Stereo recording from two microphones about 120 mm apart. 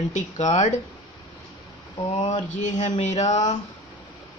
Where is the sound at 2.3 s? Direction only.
90° left.